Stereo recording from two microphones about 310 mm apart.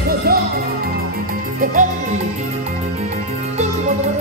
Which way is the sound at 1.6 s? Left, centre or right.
Right.